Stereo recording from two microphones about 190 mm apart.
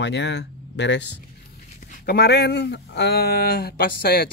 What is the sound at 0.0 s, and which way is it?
Speech, 65° left (ahead or behind).